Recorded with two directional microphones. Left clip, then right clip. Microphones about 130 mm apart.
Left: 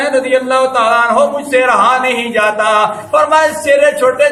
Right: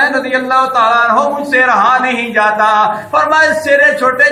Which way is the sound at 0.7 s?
25° left (ahead or behind).